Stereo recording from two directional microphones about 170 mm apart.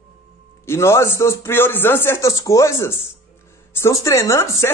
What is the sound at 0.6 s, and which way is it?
Speech, 15° left (ahead or behind).